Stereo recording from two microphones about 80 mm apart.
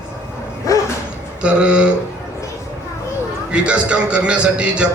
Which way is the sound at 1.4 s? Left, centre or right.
Centre.